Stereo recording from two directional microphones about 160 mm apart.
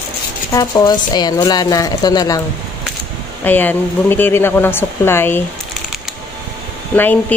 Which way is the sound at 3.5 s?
10° left (ahead or behind).